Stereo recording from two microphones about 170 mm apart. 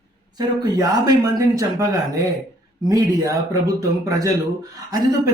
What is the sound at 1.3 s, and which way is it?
Speech, 20° right (ahead or behind).